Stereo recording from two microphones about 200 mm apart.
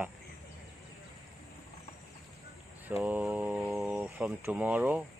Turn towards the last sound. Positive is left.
turn(degrees=-10)  # may be behind; listen again after turning